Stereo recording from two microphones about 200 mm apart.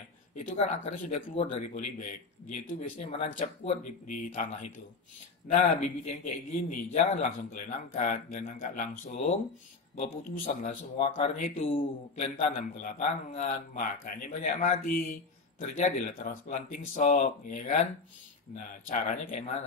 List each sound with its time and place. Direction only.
0.4 s a man's voice: 35° left (ahead or behind)
3.3 s a man's voice: 40° left (ahead or behind)
11.6 s a man's voice: 30° left (ahead or behind)